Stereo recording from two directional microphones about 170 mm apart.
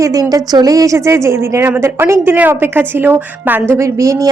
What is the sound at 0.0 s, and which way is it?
A woman's voice, 20° right (ahead or behind).